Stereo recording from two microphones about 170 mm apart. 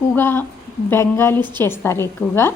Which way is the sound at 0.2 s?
15° left (ahead or behind).